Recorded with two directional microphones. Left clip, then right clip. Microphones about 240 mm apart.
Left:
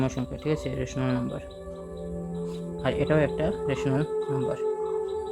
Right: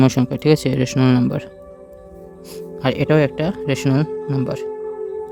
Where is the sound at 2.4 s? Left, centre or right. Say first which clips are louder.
Right 8 dB; right.